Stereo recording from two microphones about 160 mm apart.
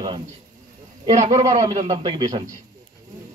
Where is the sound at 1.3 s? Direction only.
40° right (ahead or behind).